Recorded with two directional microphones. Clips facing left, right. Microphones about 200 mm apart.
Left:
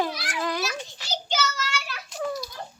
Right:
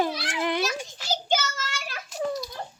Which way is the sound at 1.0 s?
50° right (ahead or behind).